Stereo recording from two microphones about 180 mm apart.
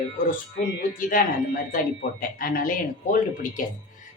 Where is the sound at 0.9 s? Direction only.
50° left (ahead or behind).